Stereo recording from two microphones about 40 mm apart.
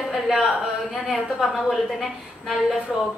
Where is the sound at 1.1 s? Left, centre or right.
Centre.